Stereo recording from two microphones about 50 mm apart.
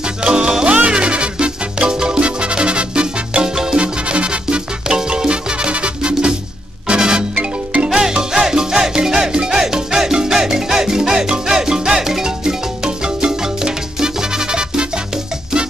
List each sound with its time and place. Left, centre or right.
0.0 s music: centre
7.3 s music: right
7.9 s music: centre